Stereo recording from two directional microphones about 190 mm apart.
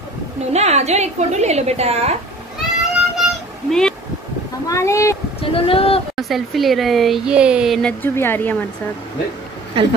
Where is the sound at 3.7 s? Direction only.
5° left (ahead or behind).